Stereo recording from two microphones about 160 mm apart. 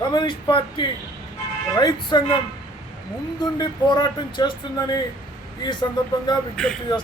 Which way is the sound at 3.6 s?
25° left (ahead or behind).